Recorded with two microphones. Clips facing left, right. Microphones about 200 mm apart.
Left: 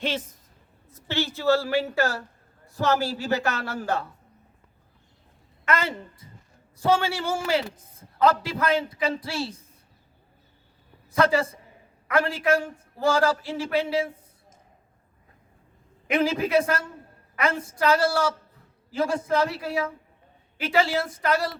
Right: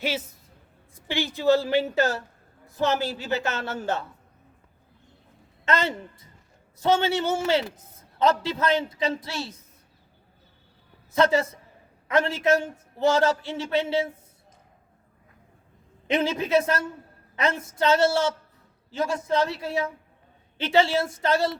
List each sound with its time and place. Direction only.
0.0 s a man's voice: 10° right (ahead or behind); by 4.0 s 25° right (ahead or behind)
5.6 s a woman's voice: 25° right (ahead or behind)
9.0 s a woman's voice: 30° left (ahead or behind)
11.1 s a man's voice: 25° right (ahead or behind)
16.0 s a woman's voice: 25° right (ahead or behind)
17.7 s a woman's voice: 25° right (ahead or behind)